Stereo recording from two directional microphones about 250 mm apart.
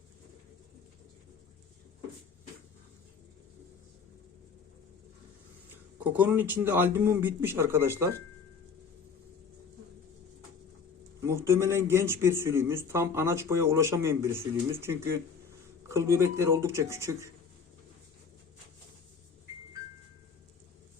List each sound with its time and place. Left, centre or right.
5.7 s a man's voice: centre
11.2 s a man's voice: centre